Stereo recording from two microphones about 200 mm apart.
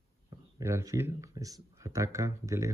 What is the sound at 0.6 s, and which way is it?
Speech, 15° right (ahead or behind).